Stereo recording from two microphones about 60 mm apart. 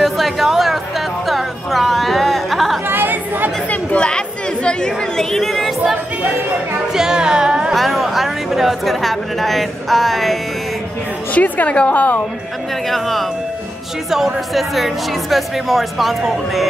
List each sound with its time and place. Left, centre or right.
0.0 s music: centre
2.9 s chatter: right
3.7 s chatter: centre
4.6 s a woman's voice: centre
6.9 s music: centre
7.7 s a woman's voice: centre
11.3 s a woman's voice: left
12.9 s a woman's voice: centre